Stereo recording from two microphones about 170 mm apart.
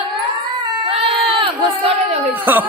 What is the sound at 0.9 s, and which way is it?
Crowd, 35° right (ahead or behind).